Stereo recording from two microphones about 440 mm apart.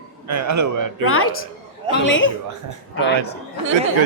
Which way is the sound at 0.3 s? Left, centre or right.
Right.